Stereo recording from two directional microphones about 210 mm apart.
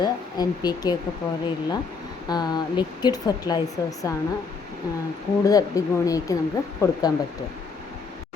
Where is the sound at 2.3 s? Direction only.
20° left (ahead or behind).